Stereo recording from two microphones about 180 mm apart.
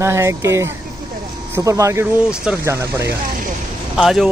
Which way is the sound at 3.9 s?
Centre (ahead or behind).